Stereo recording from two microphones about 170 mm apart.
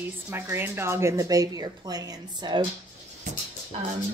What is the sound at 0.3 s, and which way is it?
Speech, 15° right (ahead or behind).